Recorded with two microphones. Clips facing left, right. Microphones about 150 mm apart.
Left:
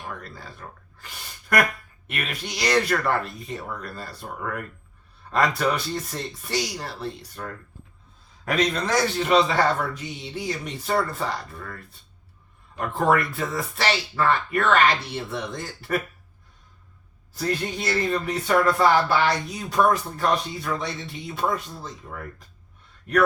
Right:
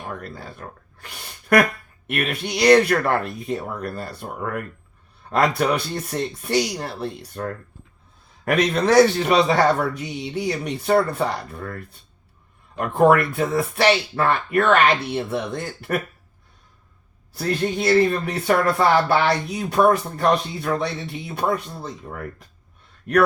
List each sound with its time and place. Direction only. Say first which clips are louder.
0.0 s speech: right 4 dB; 55° right (ahead or behind)
0.9 s a sound: right 2 dB; 65° right (ahead or behind)
2.0 s speech: right 7 dB; 60° right (ahead or behind)
17.3 s speech: right 4 dB; 60° right (ahead or behind)